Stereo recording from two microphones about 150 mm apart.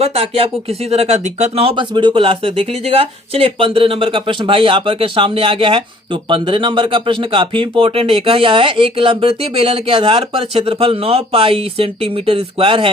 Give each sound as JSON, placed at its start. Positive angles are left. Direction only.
{"t": 0.0, "sound": "speech", "side_deg": -40}